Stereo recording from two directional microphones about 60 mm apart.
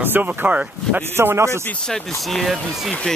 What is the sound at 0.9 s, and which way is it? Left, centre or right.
Speech, right.